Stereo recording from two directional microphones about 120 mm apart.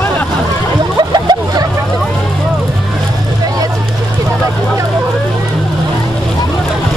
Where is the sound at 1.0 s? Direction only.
35° right (ahead or behind).